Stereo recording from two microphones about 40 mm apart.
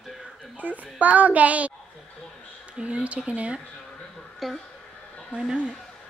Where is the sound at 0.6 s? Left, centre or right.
Right.